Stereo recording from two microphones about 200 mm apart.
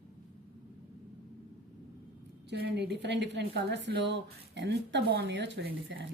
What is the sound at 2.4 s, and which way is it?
A woman's voice, 55° right (ahead or behind).